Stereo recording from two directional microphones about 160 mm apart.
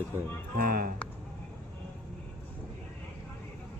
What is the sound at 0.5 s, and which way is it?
Speech, 70° right (ahead or behind).